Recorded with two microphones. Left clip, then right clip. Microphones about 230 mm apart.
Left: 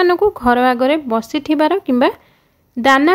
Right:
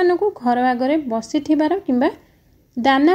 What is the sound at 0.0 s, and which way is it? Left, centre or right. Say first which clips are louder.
Speech: left 4 dB; left.